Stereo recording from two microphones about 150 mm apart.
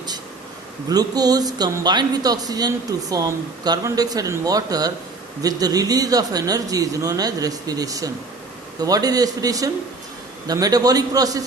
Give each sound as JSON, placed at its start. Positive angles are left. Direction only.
{"t": 0.9, "sound": "a man's voice", "side_deg": -25}